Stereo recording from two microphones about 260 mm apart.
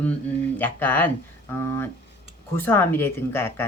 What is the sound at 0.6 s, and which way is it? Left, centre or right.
Speech, centre.